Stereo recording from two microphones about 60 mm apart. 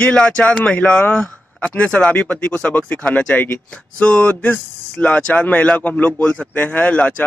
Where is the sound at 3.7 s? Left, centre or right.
Centre.